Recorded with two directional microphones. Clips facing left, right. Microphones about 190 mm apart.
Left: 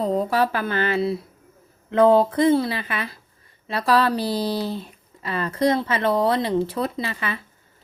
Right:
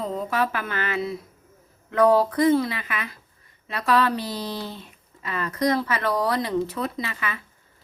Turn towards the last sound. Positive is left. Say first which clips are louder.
# left 3 dB
turn(degrees=30)  # may be behind; listen again after turning